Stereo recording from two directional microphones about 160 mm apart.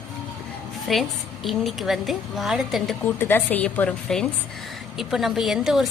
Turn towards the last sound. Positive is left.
turn(degrees=0)  # may be behind; listen again after turning